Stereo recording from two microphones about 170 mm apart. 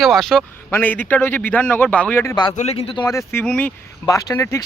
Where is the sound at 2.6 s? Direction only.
35° left (ahead or behind); by 3.4 s 20° left (ahead or behind).